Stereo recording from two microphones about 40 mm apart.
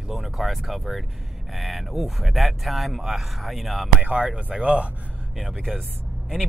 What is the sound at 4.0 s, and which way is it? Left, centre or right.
Speech, right.